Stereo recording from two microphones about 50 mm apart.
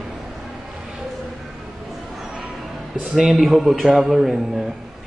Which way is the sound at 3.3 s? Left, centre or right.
Centre.